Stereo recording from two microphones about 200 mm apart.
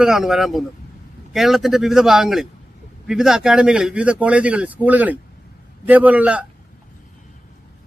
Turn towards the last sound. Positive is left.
turn(degrees=-5)  # may be behind; listen again after turning